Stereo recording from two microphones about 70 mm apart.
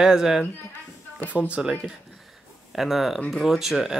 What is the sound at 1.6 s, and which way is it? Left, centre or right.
Speech, centre.